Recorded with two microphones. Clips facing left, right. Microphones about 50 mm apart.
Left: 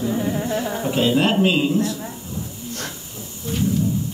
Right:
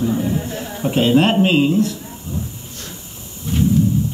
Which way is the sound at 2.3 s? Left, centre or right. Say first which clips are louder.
Right 6 dB; right.